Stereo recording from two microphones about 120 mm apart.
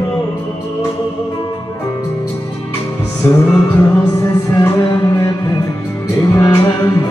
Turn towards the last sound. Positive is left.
turn(degrees=25)  # may be behind; listen again after turning